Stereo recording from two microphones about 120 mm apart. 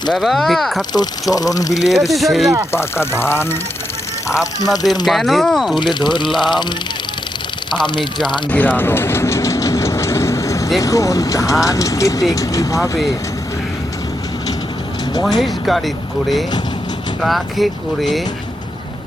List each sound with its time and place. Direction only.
0.1 s speech: centre (ahead or behind)
1.3 s speech: 30° left (ahead or behind)
1.9 s speech: centre (ahead or behind)
2.7 s speech: 20° left (ahead or behind)
5.0 s speech: centre (ahead or behind)
5.7 s speech: 40° left (ahead or behind)
7.9 s speech: 40° left (ahead or behind)
8.4 s train: 15° left (ahead or behind)
10.8 s speech: 25° left (ahead or behind)
15.2 s speech: centre (ahead or behind)
17.2 s speech: centre (ahead or behind)